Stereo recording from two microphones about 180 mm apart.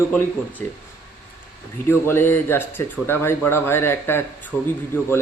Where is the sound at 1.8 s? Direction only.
15° left (ahead or behind).